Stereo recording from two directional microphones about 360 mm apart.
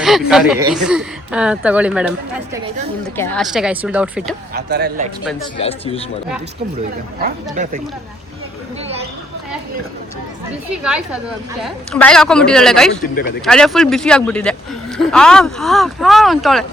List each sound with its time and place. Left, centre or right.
0.0 s speech: centre
4.5 s speech: right
5.5 s speech: centre
7.2 s speech: right
10.8 s speech: centre